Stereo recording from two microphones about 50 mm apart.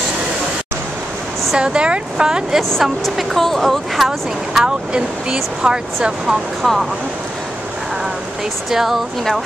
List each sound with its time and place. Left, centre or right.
1.6 s speech: centre
2.8 s speech: centre
4.6 s speech: centre
6.6 s speech: centre
8.6 s speech: centre